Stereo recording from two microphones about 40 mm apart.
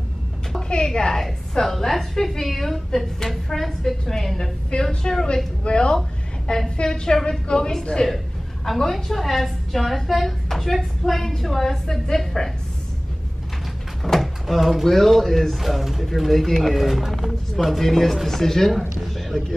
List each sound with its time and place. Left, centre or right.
0.8 s a woman's voice: centre
8.6 s a woman's voice: centre
14.0 s speech: centre
15.6 s speech: centre
16.8 s speech: centre